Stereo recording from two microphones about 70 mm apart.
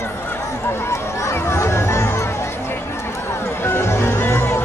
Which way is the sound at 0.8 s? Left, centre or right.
Left.